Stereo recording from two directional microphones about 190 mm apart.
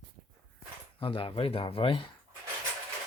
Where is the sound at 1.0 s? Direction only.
30° left (ahead or behind).